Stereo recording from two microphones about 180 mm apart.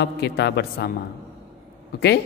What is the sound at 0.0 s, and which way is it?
Speech, 70° left (ahead or behind).